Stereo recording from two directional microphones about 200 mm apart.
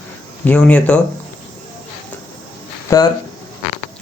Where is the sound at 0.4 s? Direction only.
5° left (ahead or behind).